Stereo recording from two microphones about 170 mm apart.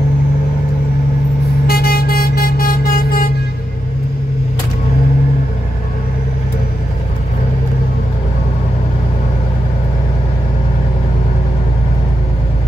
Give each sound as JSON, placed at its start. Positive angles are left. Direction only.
{"t": 1.7, "sound": "vehicle", "side_deg": 65}